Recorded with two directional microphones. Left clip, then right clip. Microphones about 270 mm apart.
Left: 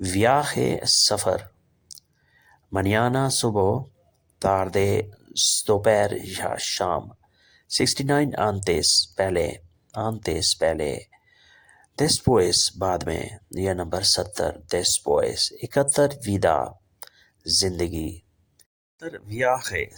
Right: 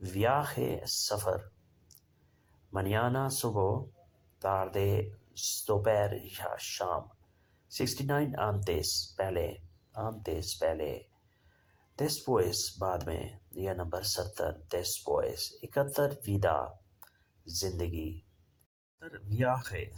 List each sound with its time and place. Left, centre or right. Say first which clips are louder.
0.0 s speech: left 10 dB; left
2.7 s speech: left 9 dB; left